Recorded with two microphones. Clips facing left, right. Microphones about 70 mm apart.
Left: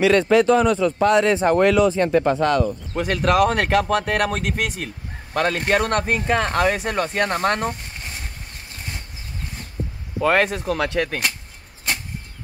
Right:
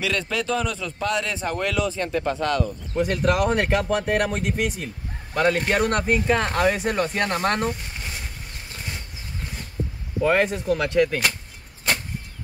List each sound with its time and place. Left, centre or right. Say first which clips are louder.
0.0 s speech: left 11 dB; left
2.9 s speech: left 1 dB; left
10.2 s speech: left 2 dB; left